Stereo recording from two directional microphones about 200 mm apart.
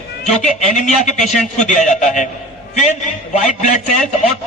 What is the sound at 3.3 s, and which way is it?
Speech, 35° left (ahead or behind).